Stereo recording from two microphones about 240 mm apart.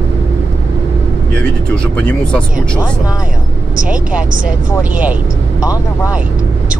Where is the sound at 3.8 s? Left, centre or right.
Centre.